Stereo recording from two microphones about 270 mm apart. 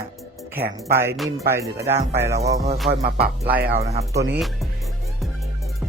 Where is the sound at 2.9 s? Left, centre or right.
Right.